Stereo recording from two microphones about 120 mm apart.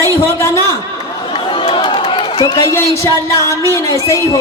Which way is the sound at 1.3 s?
45° left (ahead or behind).